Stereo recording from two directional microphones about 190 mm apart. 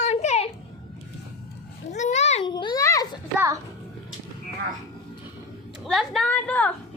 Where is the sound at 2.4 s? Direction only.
25° left (ahead or behind).